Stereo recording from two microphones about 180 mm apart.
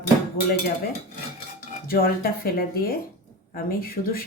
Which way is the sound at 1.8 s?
55° left (ahead or behind).